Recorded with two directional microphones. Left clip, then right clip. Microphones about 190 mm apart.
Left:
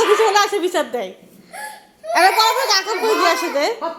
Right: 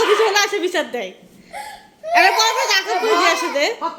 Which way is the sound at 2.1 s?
5° left (ahead or behind).